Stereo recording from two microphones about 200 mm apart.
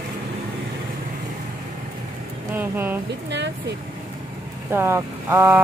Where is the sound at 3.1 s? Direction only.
60° right (ahead or behind).